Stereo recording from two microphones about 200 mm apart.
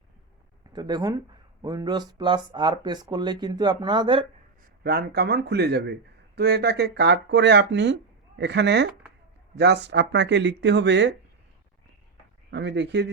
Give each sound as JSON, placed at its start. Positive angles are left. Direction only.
{"t": 0.7, "sound": "speech", "side_deg": -20}
{"t": 4.8, "sound": "speech", "side_deg": -50}
{"t": 12.5, "sound": "speech", "side_deg": -60}